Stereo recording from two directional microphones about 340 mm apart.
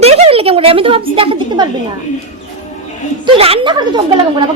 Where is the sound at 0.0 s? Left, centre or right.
Centre.